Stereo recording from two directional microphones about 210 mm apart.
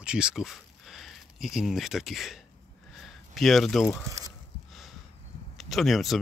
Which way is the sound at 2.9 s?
Centre (ahead or behind).